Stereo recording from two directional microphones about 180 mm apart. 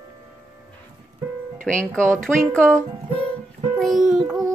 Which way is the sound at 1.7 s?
5° left (ahead or behind).